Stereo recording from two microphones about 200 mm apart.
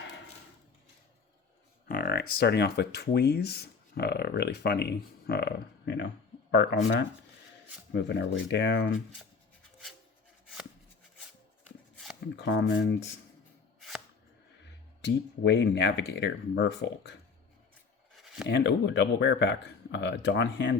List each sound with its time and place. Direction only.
1.9 s speech: 50° left (ahead or behind)
8.0 s speech: 60° left (ahead or behind)
12.4 s speech: 60° left (ahead or behind)
15.0 s speech: 60° left (ahead or behind)
18.2 s a sound: centre (ahead or behind)
18.4 s speech: 60° left (ahead or behind)